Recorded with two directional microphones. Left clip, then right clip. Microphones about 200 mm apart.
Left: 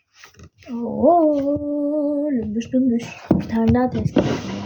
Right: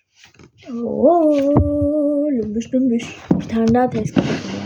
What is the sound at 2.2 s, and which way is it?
Speech, 5° right (ahead or behind).